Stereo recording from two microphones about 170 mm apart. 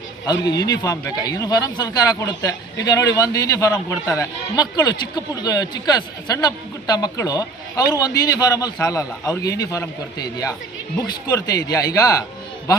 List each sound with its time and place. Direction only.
0.3 s a man's voice: 25° left (ahead or behind)
11.0 s a man's voice: 25° left (ahead or behind)